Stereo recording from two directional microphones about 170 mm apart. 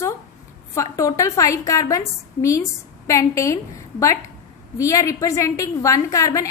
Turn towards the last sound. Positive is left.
turn(degrees=20)  # may be behind; listen again after turning